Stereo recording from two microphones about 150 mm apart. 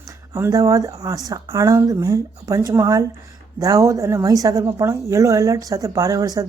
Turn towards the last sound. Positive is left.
turn(degrees=-25)  # may be behind; listen again after turning